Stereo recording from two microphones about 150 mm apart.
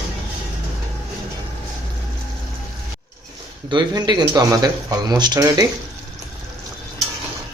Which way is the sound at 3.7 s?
30° right (ahead or behind).